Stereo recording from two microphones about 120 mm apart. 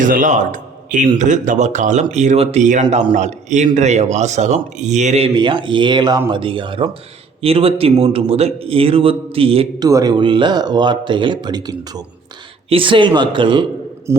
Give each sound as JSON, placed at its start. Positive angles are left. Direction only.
{"t": 0.0, "sound": "a man's voice", "side_deg": -90}
{"t": 5.2, "sound": "a man's voice", "side_deg": -45}
{"t": 9.8, "sound": "speech", "side_deg": -35}
{"t": 12.6, "sound": "a man's voice", "side_deg": -45}
{"t": 14.1, "sound": "speech", "side_deg": -25}